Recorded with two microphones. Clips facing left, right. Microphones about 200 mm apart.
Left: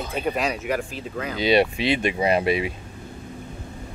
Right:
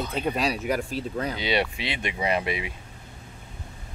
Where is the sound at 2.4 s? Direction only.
20° right (ahead or behind).